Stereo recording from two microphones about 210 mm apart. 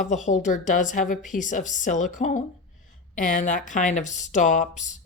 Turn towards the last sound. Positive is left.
turn(degrees=35)  # may be behind; listen again after turning